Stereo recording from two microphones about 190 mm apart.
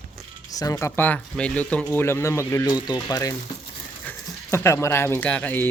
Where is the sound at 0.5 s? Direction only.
20° left (ahead or behind).